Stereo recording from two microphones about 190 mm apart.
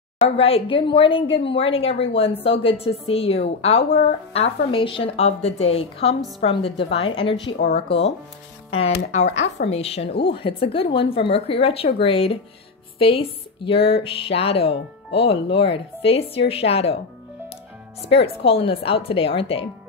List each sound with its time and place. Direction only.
0.4 s a woman's voice: 30° left (ahead or behind)
9.7 s a woman's voice: 30° left (ahead or behind)
18.1 s a woman's voice: 30° left (ahead or behind)